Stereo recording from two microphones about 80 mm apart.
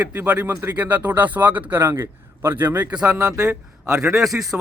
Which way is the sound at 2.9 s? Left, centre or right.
Centre.